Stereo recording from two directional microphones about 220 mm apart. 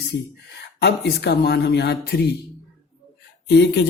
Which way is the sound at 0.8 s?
50° left (ahead or behind).